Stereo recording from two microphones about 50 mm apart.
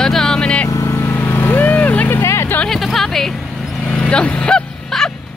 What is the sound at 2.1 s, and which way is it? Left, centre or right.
Vehicle, left.